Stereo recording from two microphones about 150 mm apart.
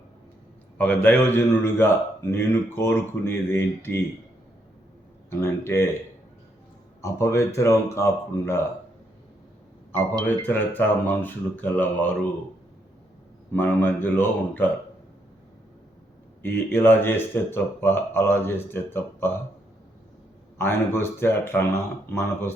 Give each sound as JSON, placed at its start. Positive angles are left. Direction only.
{"t": 0.8, "sound": "a man's voice", "side_deg": 10}
{"t": 5.3, "sound": "a man's voice", "side_deg": 15}
{"t": 7.0, "sound": "speech", "side_deg": 20}
{"t": 10.2, "sound": "a man's voice", "side_deg": 10}
{"t": 13.5, "sound": "a man's voice", "side_deg": 15}
{"t": 16.4, "sound": "a man's voice", "side_deg": 15}
{"t": 20.6, "sound": "a man's voice", "side_deg": 15}